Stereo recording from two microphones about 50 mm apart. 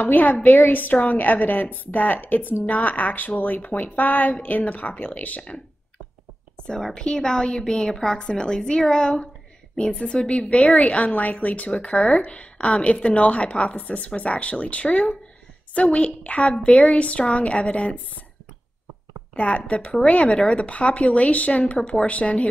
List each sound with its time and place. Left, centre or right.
0.0 s a woman's voice: left
6.7 s a woman's voice: centre
19.3 s a woman's voice: left
21.7 s a woman's voice: centre